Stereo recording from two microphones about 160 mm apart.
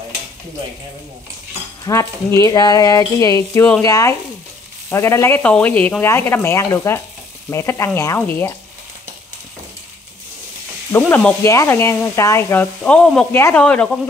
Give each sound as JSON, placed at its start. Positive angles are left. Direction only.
{"t": 1.9, "sound": "speech", "side_deg": 20}
{"t": 11.1, "sound": "speech", "side_deg": 10}